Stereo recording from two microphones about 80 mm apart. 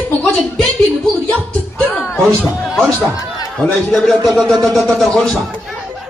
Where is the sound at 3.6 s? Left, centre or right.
Centre.